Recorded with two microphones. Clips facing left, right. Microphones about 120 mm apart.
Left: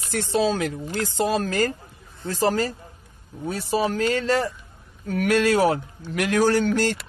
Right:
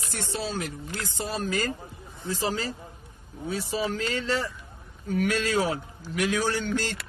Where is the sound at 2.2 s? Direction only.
55° left (ahead or behind).